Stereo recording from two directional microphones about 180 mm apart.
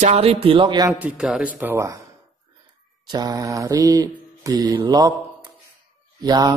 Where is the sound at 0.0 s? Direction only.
35° right (ahead or behind).